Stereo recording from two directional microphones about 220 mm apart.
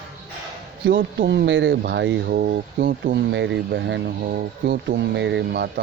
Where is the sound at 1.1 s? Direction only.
50° right (ahead or behind).